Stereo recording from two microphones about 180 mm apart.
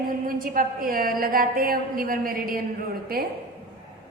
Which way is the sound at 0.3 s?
50° right (ahead or behind).